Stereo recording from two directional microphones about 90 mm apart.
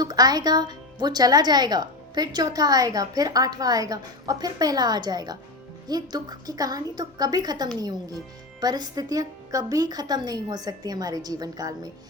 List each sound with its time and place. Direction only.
0.0 s speech: 45° right (ahead or behind)